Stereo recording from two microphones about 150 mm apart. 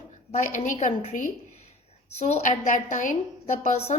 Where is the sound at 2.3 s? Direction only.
55° left (ahead or behind).